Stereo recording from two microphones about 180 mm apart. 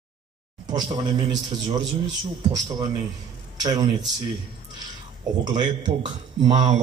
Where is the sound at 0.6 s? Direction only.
25° right (ahead or behind).